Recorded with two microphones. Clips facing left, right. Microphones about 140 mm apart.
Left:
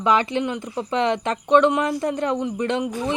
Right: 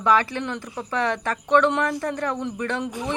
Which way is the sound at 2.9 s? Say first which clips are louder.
Left 3 dB; 15° right (ahead or behind).